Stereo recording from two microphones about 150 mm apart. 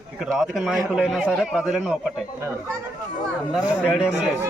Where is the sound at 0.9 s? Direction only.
Centre (ahead or behind).